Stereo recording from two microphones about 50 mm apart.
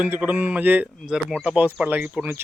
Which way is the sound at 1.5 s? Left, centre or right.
Right.